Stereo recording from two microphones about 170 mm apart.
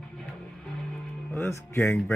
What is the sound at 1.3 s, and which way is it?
Speech, 15° left (ahead or behind).